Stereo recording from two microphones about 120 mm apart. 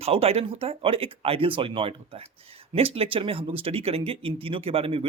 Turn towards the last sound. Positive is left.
turn(degrees=-50)  # may be behind; listen again after turning